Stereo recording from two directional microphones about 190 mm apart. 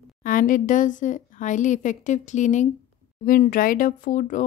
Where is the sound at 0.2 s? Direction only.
45° left (ahead or behind).